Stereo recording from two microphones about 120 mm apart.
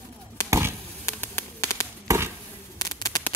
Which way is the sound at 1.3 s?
20° left (ahead or behind).